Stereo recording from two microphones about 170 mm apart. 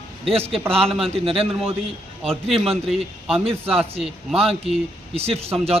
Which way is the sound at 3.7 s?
35° right (ahead or behind).